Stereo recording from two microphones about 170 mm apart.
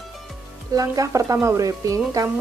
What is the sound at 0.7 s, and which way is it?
Speech, 20° right (ahead or behind).